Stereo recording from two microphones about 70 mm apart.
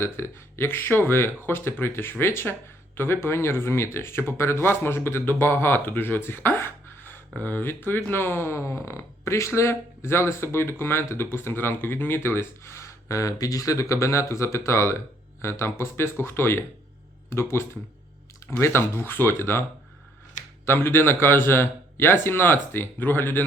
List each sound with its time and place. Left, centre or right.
0.0 s speech: left
20.7 s speech: left